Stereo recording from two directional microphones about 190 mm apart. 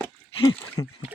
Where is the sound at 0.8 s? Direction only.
20° left (ahead or behind).